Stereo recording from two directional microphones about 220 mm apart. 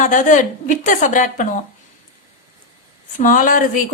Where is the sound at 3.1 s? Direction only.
40° left (ahead or behind).